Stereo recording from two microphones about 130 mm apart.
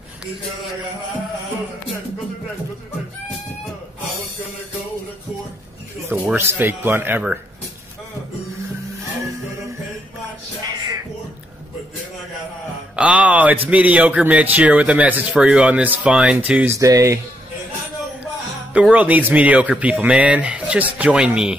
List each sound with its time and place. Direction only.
6.0 s a man's voice: 20° right (ahead or behind)
12.9 s a man's voice: 10° right (ahead or behind)
16.7 s speech: 25° right (ahead or behind)
18.7 s a man's voice: 10° right (ahead or behind)